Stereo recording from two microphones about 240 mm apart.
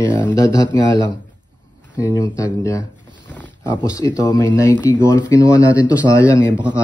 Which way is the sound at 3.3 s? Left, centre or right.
Centre.